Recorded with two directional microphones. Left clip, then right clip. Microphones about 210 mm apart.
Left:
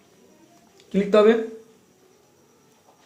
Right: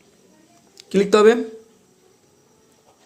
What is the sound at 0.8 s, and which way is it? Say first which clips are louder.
Speech: right 3 dB; 45° right (ahead or behind).